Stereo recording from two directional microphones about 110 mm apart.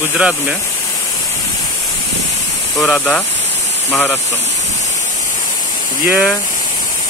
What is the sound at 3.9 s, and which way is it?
Speech, 20° left (ahead or behind).